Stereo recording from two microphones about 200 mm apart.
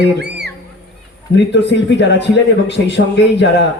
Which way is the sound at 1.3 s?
60° left (ahead or behind).